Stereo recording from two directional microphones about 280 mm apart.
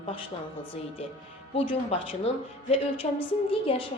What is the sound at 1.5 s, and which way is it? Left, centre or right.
A woman's voice, centre.